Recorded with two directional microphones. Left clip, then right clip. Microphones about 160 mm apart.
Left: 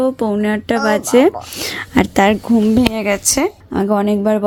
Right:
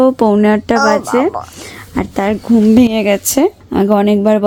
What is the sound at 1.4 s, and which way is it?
Speech, 35° left (ahead or behind).